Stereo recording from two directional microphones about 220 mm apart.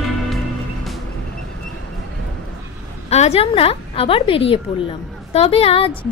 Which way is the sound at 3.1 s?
30° left (ahead or behind).